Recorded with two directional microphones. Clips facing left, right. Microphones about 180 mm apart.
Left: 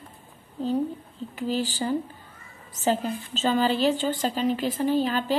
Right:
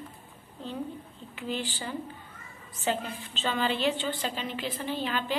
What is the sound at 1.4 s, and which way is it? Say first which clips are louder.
A woman's voice: left 7 dB; 40° left (ahead or behind).